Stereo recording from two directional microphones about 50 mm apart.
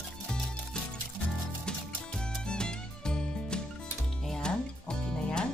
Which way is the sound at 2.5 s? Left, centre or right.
Centre.